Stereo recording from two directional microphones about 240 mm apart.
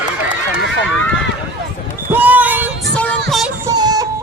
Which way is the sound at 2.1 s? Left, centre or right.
Centre.